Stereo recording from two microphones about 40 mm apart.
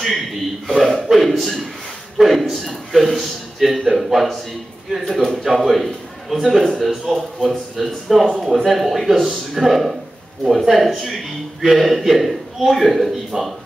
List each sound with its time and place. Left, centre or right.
0.0 s a man's voice: centre
13.3 s speech: centre